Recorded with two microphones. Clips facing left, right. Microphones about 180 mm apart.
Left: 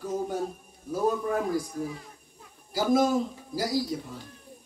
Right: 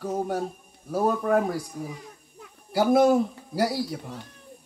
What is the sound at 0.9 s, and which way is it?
Speech, 60° right (ahead or behind).